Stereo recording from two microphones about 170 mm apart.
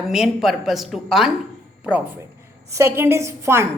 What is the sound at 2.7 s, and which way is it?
Speech, 15° right (ahead or behind).